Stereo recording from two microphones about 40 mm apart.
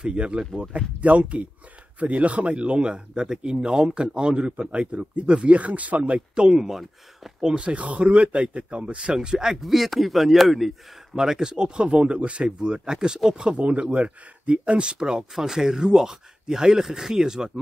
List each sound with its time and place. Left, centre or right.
0.0 s speech: right
6.1 s speech: right
6.5 s speech: centre
7.4 s speech: right
9.5 s a man's voice: centre
11.1 s speech: centre